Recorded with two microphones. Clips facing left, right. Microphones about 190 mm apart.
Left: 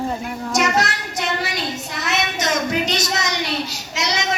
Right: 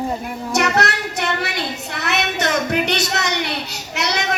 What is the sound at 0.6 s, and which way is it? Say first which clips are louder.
A child's voice: right 1 dB; 65° right (ahead or behind).